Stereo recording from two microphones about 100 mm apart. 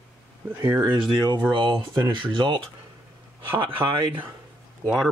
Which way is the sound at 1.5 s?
50° right (ahead or behind).